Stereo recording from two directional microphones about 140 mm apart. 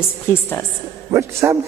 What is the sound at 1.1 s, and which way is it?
Speech, 20° right (ahead or behind).